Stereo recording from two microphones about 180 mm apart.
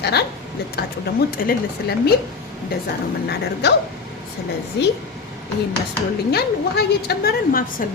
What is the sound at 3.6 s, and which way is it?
Speech, 70° left (ahead or behind).